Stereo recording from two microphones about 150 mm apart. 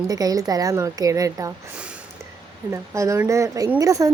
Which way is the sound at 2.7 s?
20° right (ahead or behind).